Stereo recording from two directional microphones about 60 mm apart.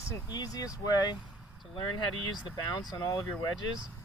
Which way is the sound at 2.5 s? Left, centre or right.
Left.